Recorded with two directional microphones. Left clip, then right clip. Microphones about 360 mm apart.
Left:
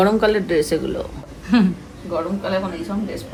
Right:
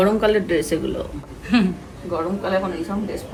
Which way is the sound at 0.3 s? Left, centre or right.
Left.